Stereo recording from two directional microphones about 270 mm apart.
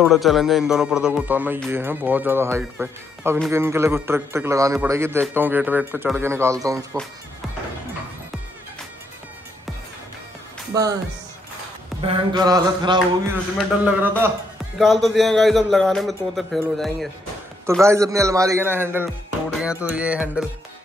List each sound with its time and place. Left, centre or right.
0.0 s a man's voice: centre
10.7 s speech: centre
12.1 s a man's voice: centre
17.8 s a man's voice: centre